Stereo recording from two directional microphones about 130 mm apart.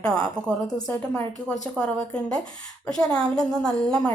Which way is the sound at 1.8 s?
5° left (ahead or behind).